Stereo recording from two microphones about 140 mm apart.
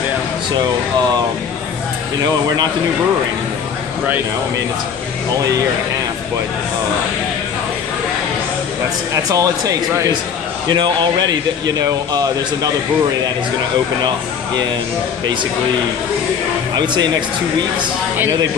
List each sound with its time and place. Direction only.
9.1 s speech: 25° right (ahead or behind)
16.7 s speech: 30° right (ahead or behind)